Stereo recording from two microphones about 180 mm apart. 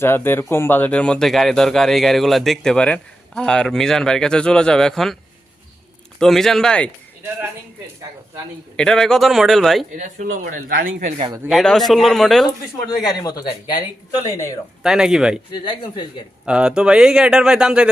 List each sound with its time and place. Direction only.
0.0 s speech: 10° left (ahead or behind)
6.1 s speech: centre (ahead or behind)
7.2 s speech: 10° right (ahead or behind)
8.7 s speech: 5° left (ahead or behind)
10.0 s speech: 45° right (ahead or behind)
11.4 s speech: centre (ahead or behind)
13.0 s speech: 20° left (ahead or behind)
14.8 s speech: 5° right (ahead or behind)
15.5 s speech: 25° left (ahead or behind)
16.5 s speech: 5° right (ahead or behind)